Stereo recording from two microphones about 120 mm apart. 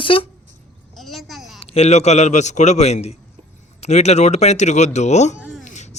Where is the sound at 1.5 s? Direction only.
60° left (ahead or behind).